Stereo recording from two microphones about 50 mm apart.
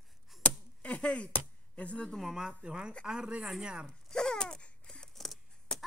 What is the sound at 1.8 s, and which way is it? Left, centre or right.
Speech, left.